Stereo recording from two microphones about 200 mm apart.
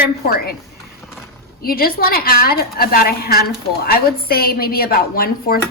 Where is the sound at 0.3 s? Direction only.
50° left (ahead or behind).